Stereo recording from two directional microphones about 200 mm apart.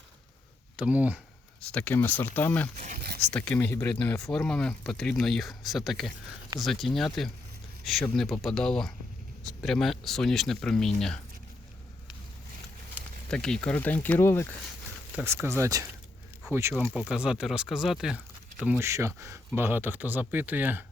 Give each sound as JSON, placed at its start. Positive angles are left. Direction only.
{"t": 0.8, "sound": "speech", "side_deg": -5}
{"t": 1.7, "sound": "speech", "side_deg": 10}
{"t": 2.7, "sound": "a sound", "side_deg": -40}
{"t": 3.3, "sound": "speech", "side_deg": 5}
{"t": 12.9, "sound": "speech", "side_deg": 5}
{"t": 15.1, "sound": "speech", "side_deg": -10}